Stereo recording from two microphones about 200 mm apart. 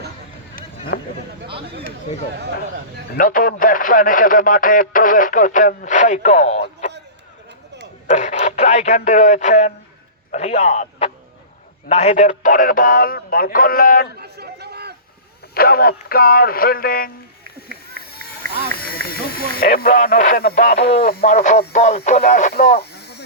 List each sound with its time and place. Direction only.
0.9 s speech: 60° left (ahead or behind)
3.2 s speech: 45° left (ahead or behind)
6.8 s a sound: 35° left (ahead or behind)
8.1 s speech: 35° left (ahead or behind)
14.2 s chatter: 55° right (ahead or behind)
15.5 s speech: 50° left (ahead or behind)
18.4 s run: 45° right (ahead or behind)
19.0 s speech: 50° left (ahead or behind)
21.2 s speech: 35° left (ahead or behind); by 23.2 s 55° left (ahead or behind)